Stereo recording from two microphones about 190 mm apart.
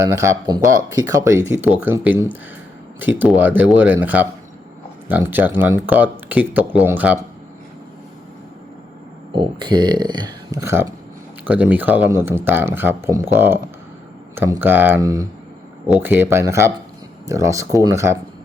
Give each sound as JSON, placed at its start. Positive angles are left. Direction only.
{"t": 0.0, "sound": "speech", "side_deg": -15}
{"t": 9.3, "sound": "speech", "side_deg": -25}